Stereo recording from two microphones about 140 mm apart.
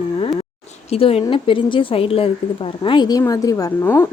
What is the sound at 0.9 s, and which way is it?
A woman's voice, 45° left (ahead or behind).